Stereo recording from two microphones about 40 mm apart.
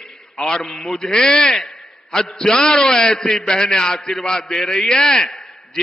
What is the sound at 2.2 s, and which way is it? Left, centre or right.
A man's voice, centre.